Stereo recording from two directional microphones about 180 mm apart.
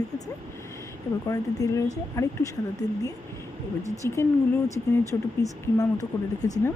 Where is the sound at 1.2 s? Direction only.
20° left (ahead or behind).